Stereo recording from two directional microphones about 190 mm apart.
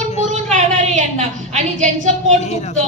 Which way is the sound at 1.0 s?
40° right (ahead or behind).